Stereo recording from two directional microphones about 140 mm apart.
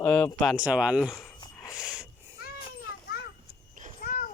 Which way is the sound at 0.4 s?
5° right (ahead or behind).